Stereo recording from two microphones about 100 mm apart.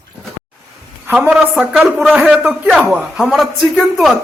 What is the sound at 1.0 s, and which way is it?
Speech, 15° right (ahead or behind).